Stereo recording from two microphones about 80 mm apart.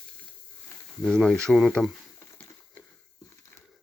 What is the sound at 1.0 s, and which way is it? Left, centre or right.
Speech, centre.